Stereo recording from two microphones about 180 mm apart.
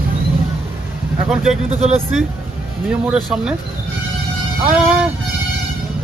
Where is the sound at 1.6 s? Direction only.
35° right (ahead or behind).